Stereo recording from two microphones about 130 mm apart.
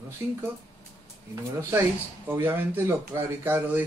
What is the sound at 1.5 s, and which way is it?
Speech, 20° right (ahead or behind).